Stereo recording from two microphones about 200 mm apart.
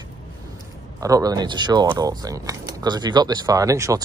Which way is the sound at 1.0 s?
15° right (ahead or behind).